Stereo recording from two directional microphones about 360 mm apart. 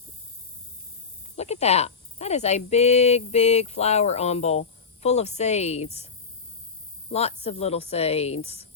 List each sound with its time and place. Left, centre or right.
1.4 s speech: centre
7.1 s speech: centre